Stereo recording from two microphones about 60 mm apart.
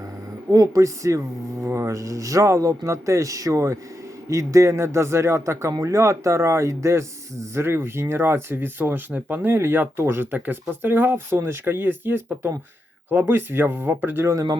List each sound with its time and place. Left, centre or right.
0.5 s a man's voice: right
1.6 s a man's voice: right
10.3 s speech: right